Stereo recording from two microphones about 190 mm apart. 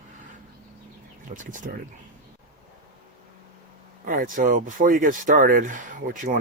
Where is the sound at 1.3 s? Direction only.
45° right (ahead or behind).